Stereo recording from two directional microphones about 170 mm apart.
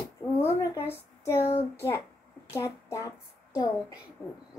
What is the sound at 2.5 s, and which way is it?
Speech, 15° left (ahead or behind).